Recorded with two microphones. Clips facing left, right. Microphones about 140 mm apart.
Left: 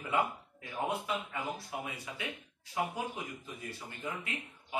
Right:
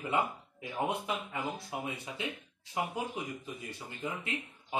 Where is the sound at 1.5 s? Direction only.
25° right (ahead or behind).